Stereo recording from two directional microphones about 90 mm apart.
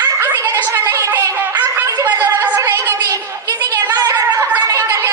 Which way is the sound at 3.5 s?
45° right (ahead or behind).